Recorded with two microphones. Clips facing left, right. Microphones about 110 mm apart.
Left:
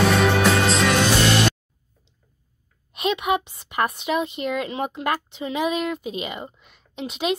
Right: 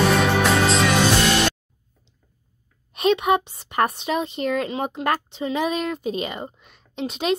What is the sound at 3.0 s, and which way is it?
A woman's voice, 35° right (ahead or behind).